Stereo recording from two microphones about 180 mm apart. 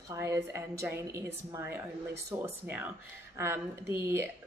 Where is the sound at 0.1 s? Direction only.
15° right (ahead or behind).